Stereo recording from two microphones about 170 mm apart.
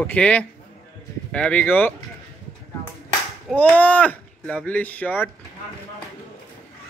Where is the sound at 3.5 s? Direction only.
10° left (ahead or behind).